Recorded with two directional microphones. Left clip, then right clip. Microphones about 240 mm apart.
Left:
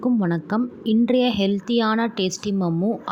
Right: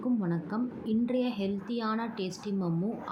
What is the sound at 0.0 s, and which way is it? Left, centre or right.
A woman's voice, left.